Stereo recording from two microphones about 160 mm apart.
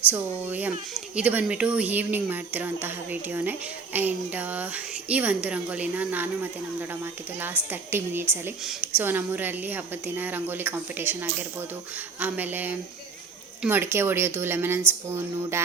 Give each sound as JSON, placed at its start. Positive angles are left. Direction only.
{"t": 0.1, "sound": "speech", "side_deg": -10}
{"t": 8.6, "sound": "a woman's voice", "side_deg": -5}